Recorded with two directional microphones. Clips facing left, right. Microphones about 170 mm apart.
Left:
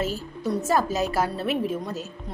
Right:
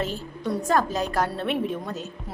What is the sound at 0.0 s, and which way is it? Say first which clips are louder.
A woman's voice: left 1 dB; 5° left (ahead or behind).